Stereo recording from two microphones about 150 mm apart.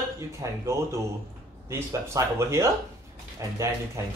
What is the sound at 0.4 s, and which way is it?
Speech, 20° right (ahead or behind).